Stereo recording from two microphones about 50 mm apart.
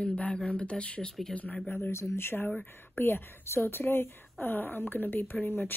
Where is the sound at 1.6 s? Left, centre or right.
Left.